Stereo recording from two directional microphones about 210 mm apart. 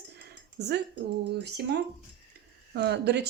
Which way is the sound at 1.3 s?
50° right (ahead or behind).